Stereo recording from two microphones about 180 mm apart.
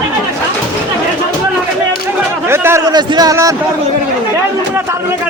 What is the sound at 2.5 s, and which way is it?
A man's voice, 15° right (ahead or behind).